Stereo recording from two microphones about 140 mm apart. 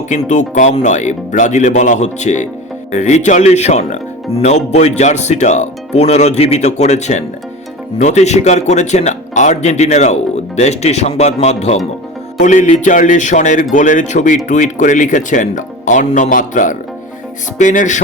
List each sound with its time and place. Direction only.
0.1 s speech: 60° left (ahead or behind)